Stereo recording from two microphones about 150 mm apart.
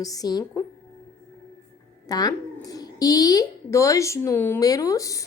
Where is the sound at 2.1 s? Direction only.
25° left (ahead or behind).